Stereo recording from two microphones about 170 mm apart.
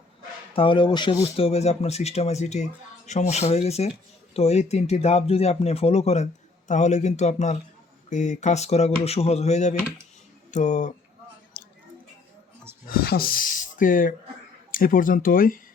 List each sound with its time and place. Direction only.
0.5 s speech: 30° left (ahead or behind); by 10.9 s 45° left (ahead or behind)
11.6 s a sound: 60° left (ahead or behind)
12.9 s speech: 60° left (ahead or behind)